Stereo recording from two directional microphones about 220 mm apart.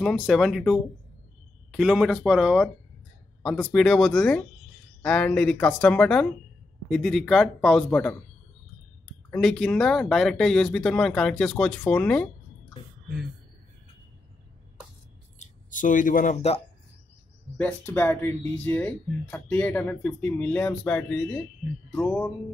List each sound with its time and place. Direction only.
0.0 s speech: centre (ahead or behind)
9.3 s speech: centre (ahead or behind)
15.3 s speech: 35° left (ahead or behind)
17.6 s speech: 10° left (ahead or behind)